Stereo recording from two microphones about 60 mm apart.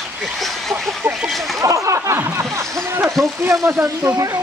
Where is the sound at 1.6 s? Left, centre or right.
Right.